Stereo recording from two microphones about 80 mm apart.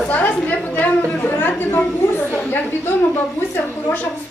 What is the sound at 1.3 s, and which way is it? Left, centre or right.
Chatter, left.